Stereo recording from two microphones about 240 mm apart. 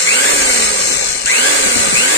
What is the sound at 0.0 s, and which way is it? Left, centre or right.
Tools, left.